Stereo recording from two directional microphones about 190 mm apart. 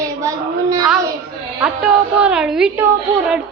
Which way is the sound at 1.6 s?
5° right (ahead or behind).